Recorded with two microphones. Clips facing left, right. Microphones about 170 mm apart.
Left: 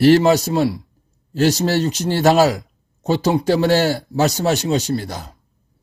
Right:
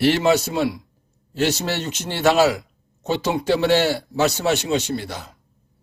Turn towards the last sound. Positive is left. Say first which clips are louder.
# left 4 dB
turn(degrees=40)  # may be behind; listen again after turning